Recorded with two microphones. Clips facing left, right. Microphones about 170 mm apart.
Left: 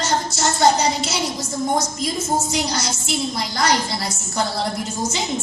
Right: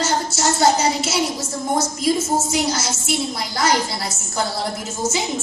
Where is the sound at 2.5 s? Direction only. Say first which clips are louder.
Right 2 dB; 5° right (ahead or behind).